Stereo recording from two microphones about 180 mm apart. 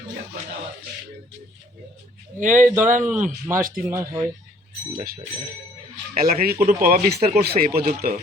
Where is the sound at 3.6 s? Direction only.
50° right (ahead or behind).